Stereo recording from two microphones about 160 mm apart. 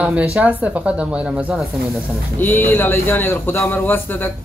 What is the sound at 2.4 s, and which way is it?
A man's voice, 10° left (ahead or behind).